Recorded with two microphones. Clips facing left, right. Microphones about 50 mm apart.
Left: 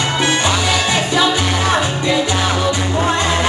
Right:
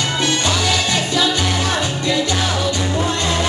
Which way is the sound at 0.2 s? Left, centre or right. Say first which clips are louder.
Left 2 dB; left.